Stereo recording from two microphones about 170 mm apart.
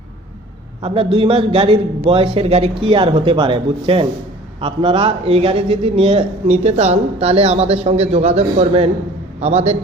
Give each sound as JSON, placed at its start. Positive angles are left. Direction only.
{"t": 0.8, "sound": "a man's voice", "side_deg": -35}